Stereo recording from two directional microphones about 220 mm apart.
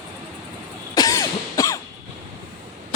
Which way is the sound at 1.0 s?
15° left (ahead or behind).